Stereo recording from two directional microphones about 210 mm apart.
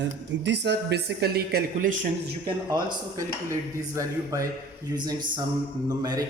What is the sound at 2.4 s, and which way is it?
A man's voice, 20° right (ahead or behind).